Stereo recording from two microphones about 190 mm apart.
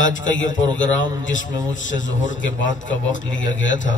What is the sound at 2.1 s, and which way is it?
A man's voice, 80° left.